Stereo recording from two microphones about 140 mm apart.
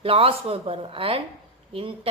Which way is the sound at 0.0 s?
40° right (ahead or behind).